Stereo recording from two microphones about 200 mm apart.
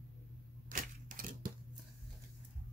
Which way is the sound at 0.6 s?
40° right (ahead or behind).